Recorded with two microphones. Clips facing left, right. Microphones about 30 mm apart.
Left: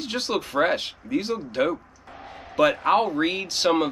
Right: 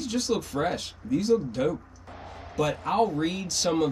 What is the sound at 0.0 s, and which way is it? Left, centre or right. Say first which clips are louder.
Speech: left 1 dB; left.